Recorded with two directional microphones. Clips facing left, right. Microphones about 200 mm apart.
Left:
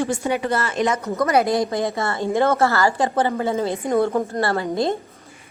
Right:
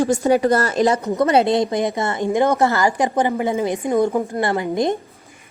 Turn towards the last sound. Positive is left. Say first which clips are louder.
# right 2 dB
turn(degrees=-15)  # may be behind; listen again after turning